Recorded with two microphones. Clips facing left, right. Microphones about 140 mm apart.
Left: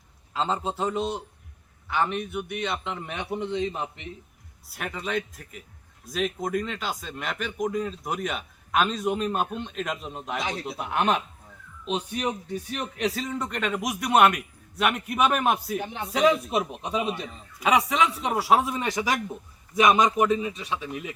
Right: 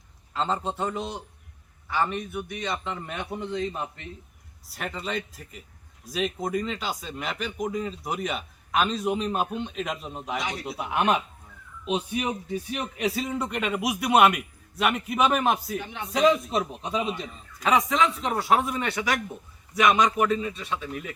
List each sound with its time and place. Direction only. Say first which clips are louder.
0.3 s a man's voice: even; centre (ahead or behind); by 4.1 s 15° left (ahead or behind)
4.7 s a man's voice: left 1 dB; centre (ahead or behind)